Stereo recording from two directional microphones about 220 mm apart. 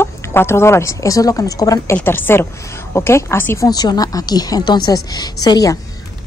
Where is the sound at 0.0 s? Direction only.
10° left (ahead or behind).